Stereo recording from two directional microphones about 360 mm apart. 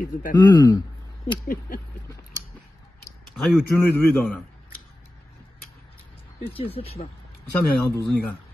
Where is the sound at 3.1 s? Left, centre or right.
Centre.